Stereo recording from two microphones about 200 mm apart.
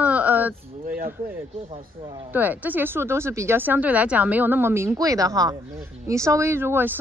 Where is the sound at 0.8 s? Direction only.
45° right (ahead or behind).